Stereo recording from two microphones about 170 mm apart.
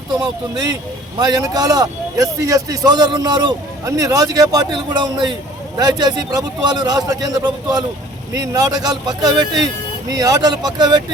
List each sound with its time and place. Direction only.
0.1 s a man's voice: 25° right (ahead or behind)